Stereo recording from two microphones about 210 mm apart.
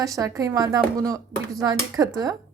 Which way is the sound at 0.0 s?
15° right (ahead or behind).